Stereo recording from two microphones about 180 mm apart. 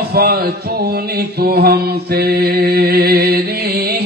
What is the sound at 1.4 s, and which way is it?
Mantra, 60° right (ahead or behind).